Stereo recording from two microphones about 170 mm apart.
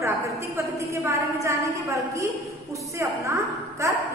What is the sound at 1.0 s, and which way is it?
A woman's voice, 15° right (ahead or behind).